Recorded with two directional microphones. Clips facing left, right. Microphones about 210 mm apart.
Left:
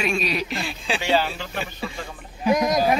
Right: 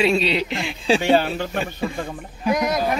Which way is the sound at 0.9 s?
50° right (ahead or behind).